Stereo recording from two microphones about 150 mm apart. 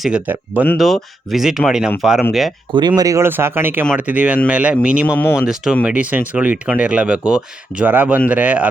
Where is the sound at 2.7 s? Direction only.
30° right (ahead or behind).